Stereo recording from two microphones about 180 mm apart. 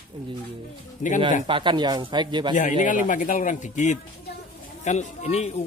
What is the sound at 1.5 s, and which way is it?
A man's voice, 25° right (ahead or behind).